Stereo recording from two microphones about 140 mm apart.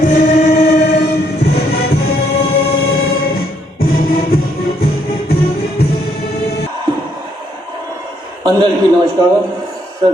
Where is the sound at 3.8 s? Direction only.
90° left.